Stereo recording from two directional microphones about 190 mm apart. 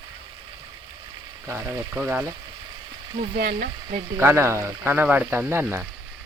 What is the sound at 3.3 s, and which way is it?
Speech, 55° right (ahead or behind).